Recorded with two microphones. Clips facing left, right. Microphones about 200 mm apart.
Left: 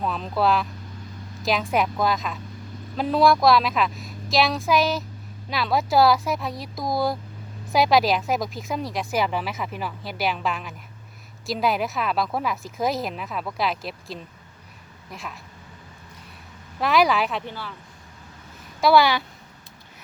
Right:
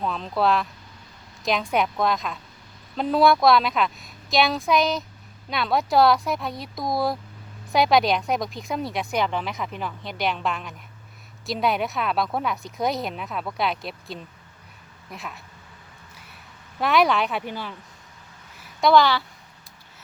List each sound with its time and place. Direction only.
0.0 s speech: 5° left (ahead or behind)
16.8 s speech: centre (ahead or behind)
17.4 s speech: 15° right (ahead or behind)
18.8 s speech: 5° left (ahead or behind)